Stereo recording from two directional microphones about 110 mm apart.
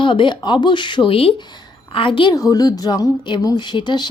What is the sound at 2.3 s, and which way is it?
A woman's voice, 35° left (ahead or behind).